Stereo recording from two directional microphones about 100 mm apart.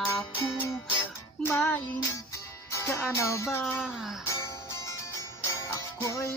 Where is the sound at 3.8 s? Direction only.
5° right (ahead or behind).